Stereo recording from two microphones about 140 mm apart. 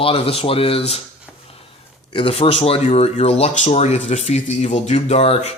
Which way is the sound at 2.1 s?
40° left (ahead or behind).